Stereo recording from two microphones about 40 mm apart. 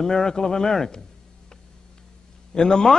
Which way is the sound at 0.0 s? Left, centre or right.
Centre.